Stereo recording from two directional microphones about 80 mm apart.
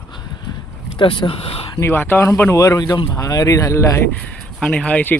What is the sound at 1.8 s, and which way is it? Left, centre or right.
Speech, left.